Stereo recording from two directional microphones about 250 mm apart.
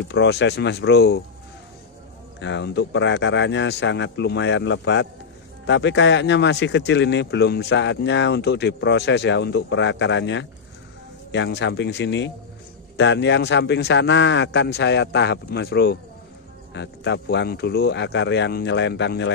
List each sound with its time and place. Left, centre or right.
0.1 s speech: left
2.4 s speech: left